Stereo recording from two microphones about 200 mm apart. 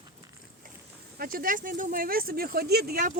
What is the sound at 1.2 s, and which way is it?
Speech, 45° right (ahead or behind).